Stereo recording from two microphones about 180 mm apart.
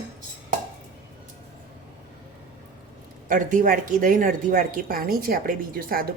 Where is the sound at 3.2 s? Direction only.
50° right (ahead or behind).